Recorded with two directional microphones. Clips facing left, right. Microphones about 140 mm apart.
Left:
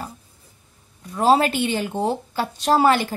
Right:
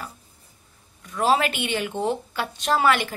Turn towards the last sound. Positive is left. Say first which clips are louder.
# left 4 dB
turn(degrees=35)  # may be behind; listen again after turning